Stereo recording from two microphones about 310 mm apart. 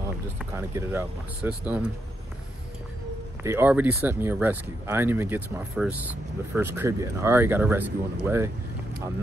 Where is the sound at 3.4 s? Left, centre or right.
Centre.